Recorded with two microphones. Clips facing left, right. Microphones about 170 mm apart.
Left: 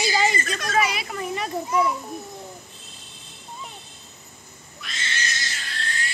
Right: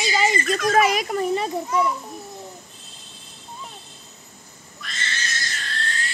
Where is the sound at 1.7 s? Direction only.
10° left (ahead or behind).